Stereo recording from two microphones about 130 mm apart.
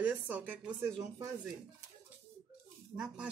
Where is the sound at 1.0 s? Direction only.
25° right (ahead or behind).